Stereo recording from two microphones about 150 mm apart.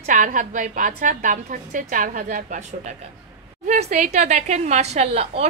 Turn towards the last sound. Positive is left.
turn(degrees=-45)  # may be behind; listen again after turning